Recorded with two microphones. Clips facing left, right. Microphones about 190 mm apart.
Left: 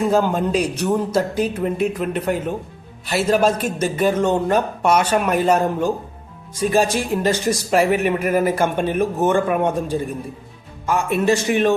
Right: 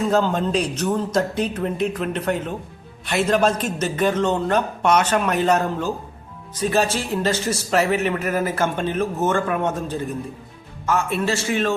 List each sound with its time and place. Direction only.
0.0 s speech: 10° left (ahead or behind)